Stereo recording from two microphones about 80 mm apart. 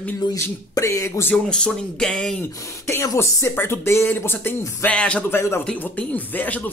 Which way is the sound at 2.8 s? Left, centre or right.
Left.